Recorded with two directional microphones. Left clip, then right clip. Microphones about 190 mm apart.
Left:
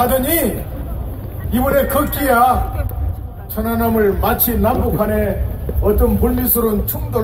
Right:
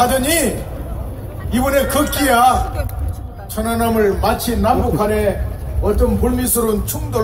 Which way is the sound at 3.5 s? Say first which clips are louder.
Even; 15° left (ahead or behind).